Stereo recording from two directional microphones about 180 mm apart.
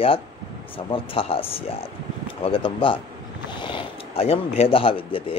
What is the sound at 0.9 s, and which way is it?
A man's voice, 30° left (ahead or behind).